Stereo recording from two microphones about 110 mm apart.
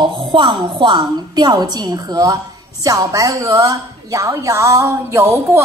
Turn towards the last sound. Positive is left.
turn(degrees=-25)  # may be behind; listen again after turning